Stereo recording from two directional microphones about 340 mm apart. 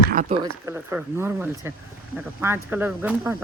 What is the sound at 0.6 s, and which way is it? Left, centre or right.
A man's voice, centre.